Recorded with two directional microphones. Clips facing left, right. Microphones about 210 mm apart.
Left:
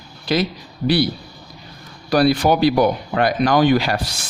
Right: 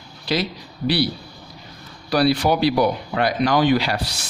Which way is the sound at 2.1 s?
50° left (ahead or behind).